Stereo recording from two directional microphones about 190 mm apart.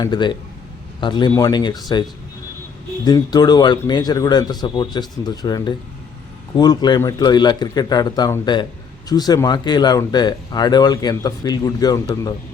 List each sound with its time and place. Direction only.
0.0 s speech: 25° left (ahead or behind)